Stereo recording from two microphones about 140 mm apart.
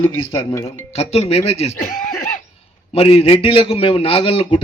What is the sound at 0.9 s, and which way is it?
Speech, 45° left (ahead or behind).